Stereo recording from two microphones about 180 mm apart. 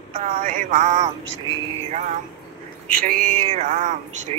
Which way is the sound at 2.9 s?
50° right (ahead or behind).